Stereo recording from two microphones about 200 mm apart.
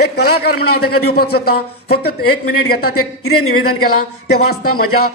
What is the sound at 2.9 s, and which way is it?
Speech, 90° left.